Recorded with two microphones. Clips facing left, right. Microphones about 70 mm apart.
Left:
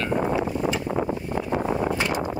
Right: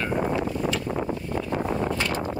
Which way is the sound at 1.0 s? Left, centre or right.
Left.